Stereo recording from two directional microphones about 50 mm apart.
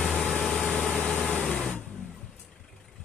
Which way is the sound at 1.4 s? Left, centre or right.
Centre.